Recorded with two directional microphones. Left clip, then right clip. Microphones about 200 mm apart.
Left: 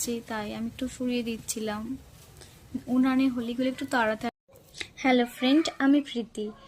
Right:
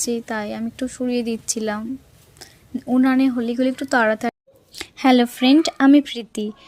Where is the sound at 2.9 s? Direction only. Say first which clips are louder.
Right 8 dB; 30° right (ahead or behind).